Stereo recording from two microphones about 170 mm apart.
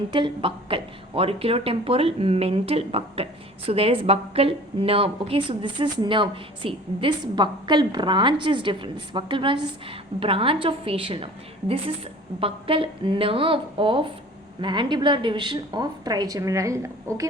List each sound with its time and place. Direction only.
0.1 s a woman's voice: 30° right (ahead or behind)
12.4 s a woman's voice: 35° right (ahead or behind)